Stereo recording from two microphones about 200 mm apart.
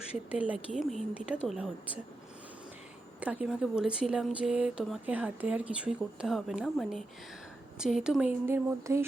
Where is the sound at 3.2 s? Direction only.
5° right (ahead or behind).